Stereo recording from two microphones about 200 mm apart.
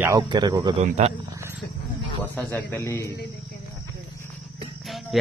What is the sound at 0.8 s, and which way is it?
Speech, 35° right (ahead or behind).